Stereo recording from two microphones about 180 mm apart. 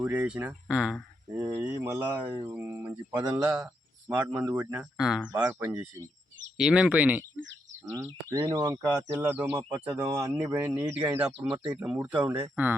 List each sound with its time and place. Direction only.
0.0 s speech: 5° right (ahead or behind)
3.2 s speech: 20° right (ahead or behind)
4.1 s speech: 10° right (ahead or behind)
11.3 s speech: 30° right (ahead or behind)
11.8 s speech: 10° right (ahead or behind)